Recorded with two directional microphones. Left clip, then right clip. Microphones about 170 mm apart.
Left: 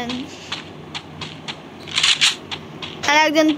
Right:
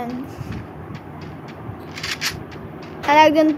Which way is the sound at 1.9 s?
5° right (ahead or behind).